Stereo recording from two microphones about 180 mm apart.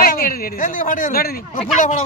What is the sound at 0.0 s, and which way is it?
A man's voice, 55° left (ahead or behind).